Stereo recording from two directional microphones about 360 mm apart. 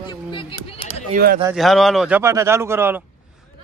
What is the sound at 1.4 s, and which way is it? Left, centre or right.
A man's voice, centre.